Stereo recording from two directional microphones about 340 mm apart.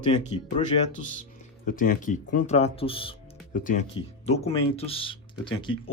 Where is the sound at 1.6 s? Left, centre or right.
Left.